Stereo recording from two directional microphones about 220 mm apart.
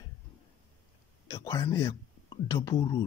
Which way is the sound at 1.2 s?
15° left (ahead or behind).